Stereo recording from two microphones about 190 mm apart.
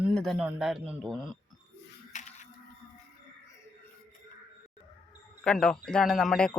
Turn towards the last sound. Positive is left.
turn(degrees=5)  # may be behind; listen again after turning